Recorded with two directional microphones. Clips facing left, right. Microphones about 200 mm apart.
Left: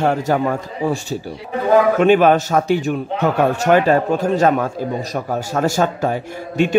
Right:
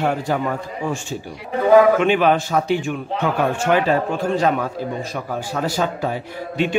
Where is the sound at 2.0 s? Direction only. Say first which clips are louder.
Left 4 dB; 45° left (ahead or behind).